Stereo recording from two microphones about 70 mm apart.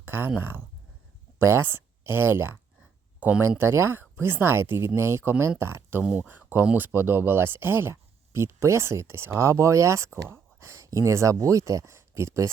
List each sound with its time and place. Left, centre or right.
0.0 s a sound: right
0.3 s speech: right
3.2 s speech: centre
3.6 s speech: right
6.1 s speech: right